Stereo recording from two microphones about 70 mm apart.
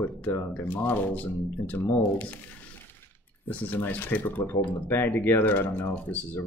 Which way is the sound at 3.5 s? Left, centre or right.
Left.